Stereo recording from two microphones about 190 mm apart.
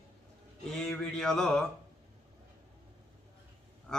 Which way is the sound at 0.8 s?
5° left (ahead or behind).